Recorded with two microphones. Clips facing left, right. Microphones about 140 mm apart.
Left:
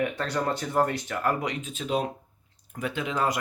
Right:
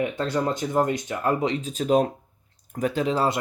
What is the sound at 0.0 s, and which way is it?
Speech, 20° right (ahead or behind).